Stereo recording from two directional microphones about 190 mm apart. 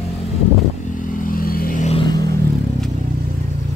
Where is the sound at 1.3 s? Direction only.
50° left (ahead or behind).